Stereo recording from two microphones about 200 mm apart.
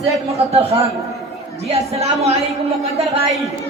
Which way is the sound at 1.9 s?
30° right (ahead or behind).